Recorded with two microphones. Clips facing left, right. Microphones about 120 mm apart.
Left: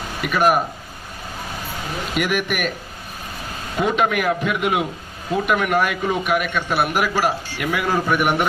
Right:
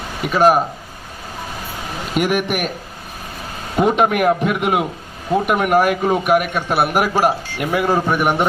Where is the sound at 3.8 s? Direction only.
40° right (ahead or behind).